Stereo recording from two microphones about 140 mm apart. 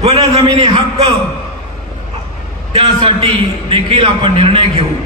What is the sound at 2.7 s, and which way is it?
A man's voice, 40° right (ahead or behind).